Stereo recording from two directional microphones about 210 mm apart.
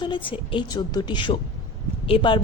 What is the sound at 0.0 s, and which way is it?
A woman's voice, 25° left (ahead or behind).